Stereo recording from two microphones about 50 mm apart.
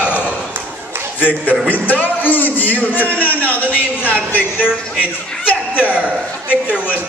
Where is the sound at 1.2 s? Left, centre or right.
Left.